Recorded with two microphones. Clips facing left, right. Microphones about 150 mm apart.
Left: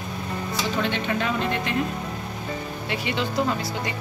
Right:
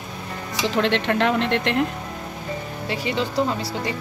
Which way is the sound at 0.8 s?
85° right.